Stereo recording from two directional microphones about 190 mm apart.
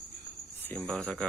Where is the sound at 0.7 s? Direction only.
5° left (ahead or behind).